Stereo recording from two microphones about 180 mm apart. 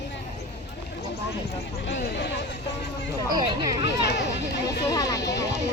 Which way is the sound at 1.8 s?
90° left.